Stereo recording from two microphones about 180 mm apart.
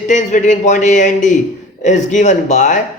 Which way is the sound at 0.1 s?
40° left (ahead or behind).